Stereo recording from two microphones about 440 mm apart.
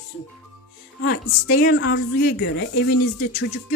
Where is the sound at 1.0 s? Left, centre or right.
Left.